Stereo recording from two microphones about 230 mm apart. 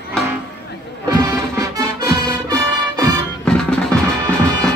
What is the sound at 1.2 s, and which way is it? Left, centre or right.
Music, centre.